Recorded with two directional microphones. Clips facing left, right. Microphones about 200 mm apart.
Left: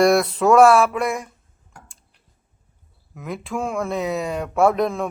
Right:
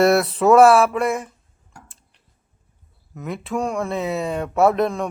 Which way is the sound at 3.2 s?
Centre (ahead or behind).